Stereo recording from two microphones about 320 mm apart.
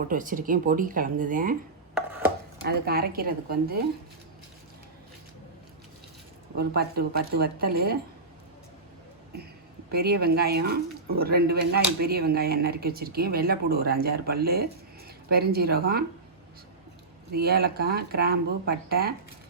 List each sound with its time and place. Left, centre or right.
0.1 s speech: right
2.6 s speech: right
6.6 s speech: right
9.9 s speech: right
17.3 s speech: right